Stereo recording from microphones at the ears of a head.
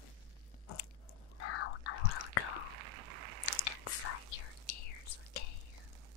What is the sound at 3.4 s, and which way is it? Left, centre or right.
Whispering, left.